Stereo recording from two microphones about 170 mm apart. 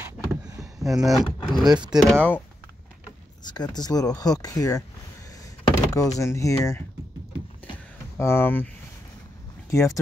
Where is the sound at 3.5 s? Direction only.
25° left (ahead or behind).